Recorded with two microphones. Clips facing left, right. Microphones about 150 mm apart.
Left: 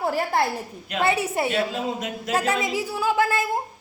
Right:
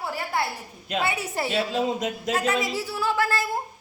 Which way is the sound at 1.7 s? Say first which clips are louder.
Right 2 dB; 35° right (ahead or behind).